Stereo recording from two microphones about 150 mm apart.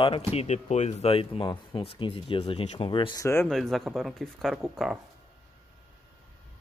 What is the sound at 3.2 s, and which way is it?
Speech, 15° left (ahead or behind).